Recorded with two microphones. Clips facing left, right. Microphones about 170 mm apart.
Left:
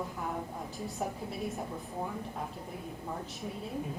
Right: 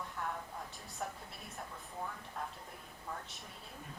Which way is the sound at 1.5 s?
15° left (ahead or behind).